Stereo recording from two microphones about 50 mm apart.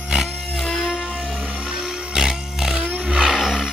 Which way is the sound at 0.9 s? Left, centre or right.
Right.